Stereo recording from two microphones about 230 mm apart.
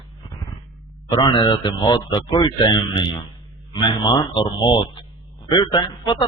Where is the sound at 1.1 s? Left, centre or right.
Centre.